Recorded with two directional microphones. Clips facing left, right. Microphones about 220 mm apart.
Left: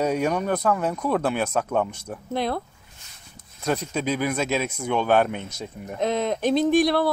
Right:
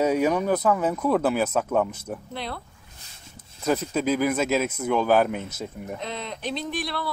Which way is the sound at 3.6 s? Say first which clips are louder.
Right 2 dB; centre (ahead or behind).